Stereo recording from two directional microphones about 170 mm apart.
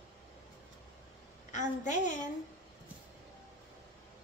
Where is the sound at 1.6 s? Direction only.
45° left (ahead or behind).